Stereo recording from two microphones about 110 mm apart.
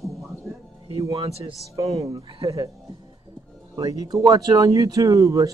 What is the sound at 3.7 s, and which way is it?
Speech, 35° right (ahead or behind).